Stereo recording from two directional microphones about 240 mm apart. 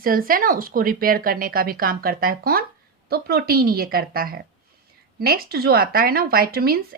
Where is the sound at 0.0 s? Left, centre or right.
Right.